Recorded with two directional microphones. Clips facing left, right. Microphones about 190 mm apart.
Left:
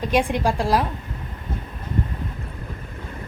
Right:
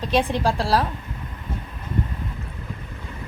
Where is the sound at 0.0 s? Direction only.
10° left (ahead or behind).